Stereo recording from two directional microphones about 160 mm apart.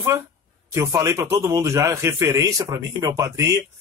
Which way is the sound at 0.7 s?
20° right (ahead or behind).